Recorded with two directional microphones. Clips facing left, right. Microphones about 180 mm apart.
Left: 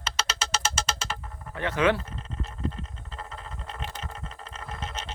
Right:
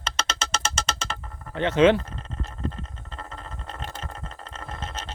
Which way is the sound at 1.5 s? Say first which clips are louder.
Right 6 dB; 25° right (ahead or behind).